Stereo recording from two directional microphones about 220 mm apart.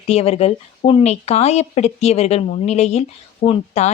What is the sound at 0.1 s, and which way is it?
Speech, 25° left (ahead or behind).